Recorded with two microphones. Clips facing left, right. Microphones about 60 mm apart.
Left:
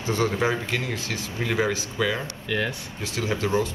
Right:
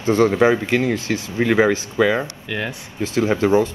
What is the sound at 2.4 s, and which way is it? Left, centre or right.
Speech, centre.